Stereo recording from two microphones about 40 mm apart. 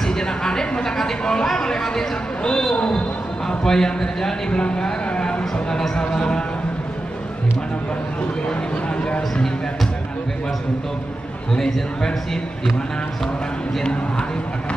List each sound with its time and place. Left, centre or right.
0.0 s speech: centre
11.5 s speech: centre